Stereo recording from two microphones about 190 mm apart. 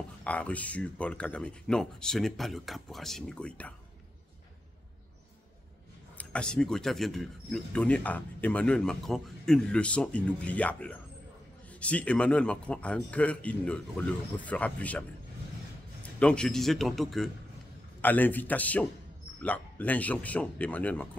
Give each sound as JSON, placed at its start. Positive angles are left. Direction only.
{"t": 0.2, "sound": "speech", "side_deg": 5}
{"t": 6.1, "sound": "a man's voice", "side_deg": 5}
{"t": 16.2, "sound": "a man's voice", "side_deg": 5}